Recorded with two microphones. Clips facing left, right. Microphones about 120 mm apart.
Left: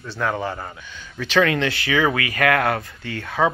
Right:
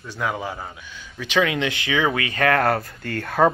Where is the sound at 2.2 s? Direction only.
30° right (ahead or behind).